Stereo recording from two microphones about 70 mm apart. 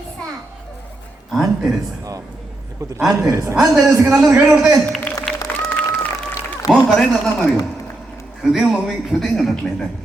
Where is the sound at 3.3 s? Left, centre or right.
Right.